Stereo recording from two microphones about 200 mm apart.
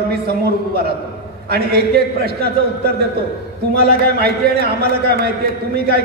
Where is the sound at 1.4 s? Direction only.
50° right (ahead or behind).